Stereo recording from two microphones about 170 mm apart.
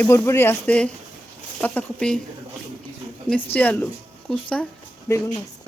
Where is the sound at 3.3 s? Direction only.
10° left (ahead or behind).